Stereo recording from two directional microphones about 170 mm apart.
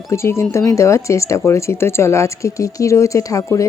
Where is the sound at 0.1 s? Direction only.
15° left (ahead or behind).